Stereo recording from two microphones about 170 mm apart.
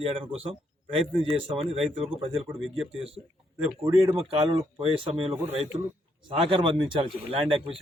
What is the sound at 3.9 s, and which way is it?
Speech, 35° right (ahead or behind).